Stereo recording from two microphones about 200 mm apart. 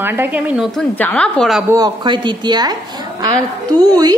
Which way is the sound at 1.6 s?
20° right (ahead or behind).